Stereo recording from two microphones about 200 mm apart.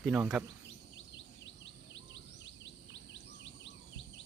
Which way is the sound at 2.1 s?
65° left (ahead or behind).